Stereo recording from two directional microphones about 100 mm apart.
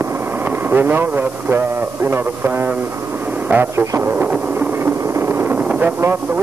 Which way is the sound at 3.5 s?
20° right (ahead or behind).